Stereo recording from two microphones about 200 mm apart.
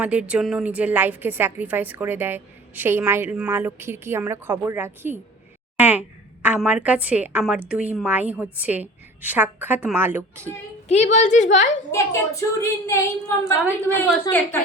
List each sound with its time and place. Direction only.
0.0 s a woman's voice: 5° right (ahead or behind)
10.8 s a woman's voice: 35° left (ahead or behind)
11.9 s a woman's voice: 15° left (ahead or behind)